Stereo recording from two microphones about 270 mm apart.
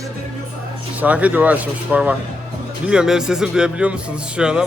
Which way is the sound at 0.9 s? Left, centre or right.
Centre.